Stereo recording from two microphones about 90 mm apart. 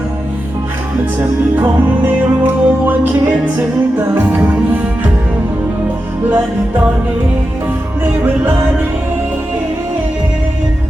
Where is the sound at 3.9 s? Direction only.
25° right (ahead or behind).